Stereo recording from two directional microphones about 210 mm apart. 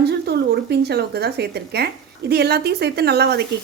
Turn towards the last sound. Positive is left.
turn(degrees=-50)  # may be behind; listen again after turning